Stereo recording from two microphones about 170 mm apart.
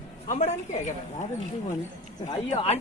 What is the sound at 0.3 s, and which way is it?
Speech, 40° left (ahead or behind).